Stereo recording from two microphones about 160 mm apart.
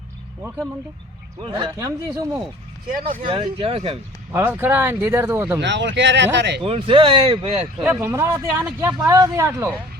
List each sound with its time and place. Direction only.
1.4 s speech: 30° right (ahead or behind)
1.7 s speech: 20° right (ahead or behind)
3.2 s speech: 35° right (ahead or behind)
4.3 s speech: 15° right (ahead or behind)
5.5 s speech: 90° right
6.6 s speech: 35° right (ahead or behind)
7.9 s speech: 15° right (ahead or behind)